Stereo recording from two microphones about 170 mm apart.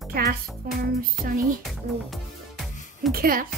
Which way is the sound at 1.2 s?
55° right (ahead or behind).